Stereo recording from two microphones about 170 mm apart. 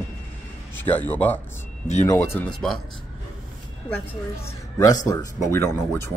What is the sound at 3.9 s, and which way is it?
Speech, 15° left (ahead or behind).